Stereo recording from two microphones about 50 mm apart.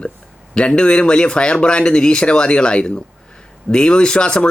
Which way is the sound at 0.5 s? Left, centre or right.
Centre.